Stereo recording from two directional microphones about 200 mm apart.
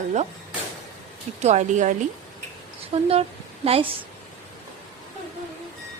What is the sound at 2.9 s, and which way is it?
A woman's voice, 30° right (ahead or behind).